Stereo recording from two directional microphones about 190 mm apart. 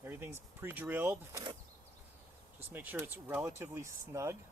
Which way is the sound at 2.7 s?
10° right (ahead or behind).